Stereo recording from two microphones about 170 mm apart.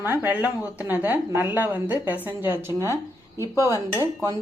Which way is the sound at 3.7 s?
20° left (ahead or behind).